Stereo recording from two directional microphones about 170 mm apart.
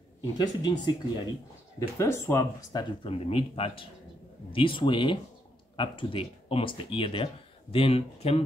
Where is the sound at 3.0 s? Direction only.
35° left (ahead or behind).